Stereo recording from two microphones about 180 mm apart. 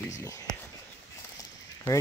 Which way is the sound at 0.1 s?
15° left (ahead or behind).